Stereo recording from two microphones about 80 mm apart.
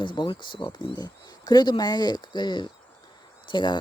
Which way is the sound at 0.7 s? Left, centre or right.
Left.